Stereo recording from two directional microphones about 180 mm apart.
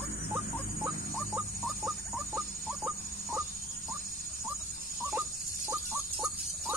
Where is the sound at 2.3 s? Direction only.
10° right (ahead or behind).